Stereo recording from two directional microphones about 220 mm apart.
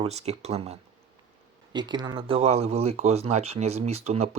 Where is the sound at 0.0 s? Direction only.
30° right (ahead or behind).